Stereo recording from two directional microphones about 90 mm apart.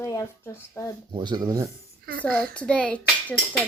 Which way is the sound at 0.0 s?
35° left (ahead or behind).